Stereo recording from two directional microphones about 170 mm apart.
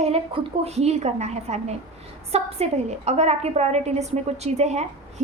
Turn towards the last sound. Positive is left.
turn(degrees=-40)  # may be behind; listen again after turning